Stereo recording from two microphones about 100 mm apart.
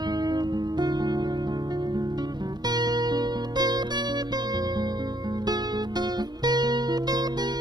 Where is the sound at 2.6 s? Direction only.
45° right (ahead or behind).